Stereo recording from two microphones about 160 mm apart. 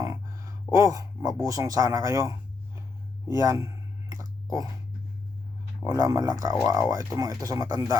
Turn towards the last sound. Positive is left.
turn(degrees=-20)  # may be behind; listen again after turning